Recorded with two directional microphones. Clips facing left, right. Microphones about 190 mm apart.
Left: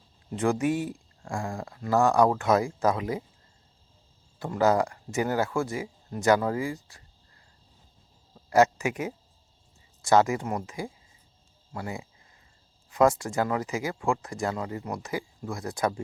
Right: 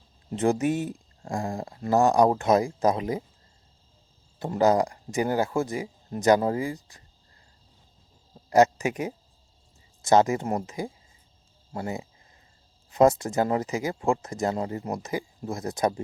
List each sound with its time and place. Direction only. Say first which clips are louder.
0.3 s speech: right 2 dB; 20° right (ahead or behind)
1.3 s speech: right 3 dB; 35° right (ahead or behind)
1.5 s a sound: right 3 dB; 20° right (ahead or behind)
1.8 s speech: right 2 dB; 20° right (ahead or behind)
4.4 s speech: right 2 dB; 20° right (ahead or behind)
8.4 s speech: right 2 dB; 20° right (ahead or behind)
10.0 s speech: right 2 dB; 20° right (ahead or behind); by 14.9 s 35° right (ahead or behind)
14.9 s speech: right 2 dB; 20° right (ahead or behind)